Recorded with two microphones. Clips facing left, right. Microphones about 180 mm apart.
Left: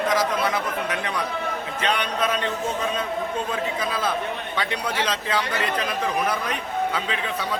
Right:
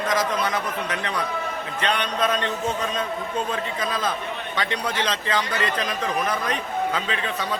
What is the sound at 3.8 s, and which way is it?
A man's voice, 10° left (ahead or behind).